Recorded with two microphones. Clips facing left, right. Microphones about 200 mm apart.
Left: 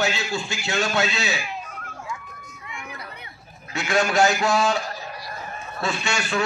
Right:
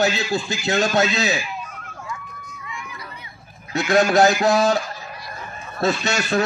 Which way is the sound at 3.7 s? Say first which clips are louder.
Right 5 dB; 35° right (ahead or behind).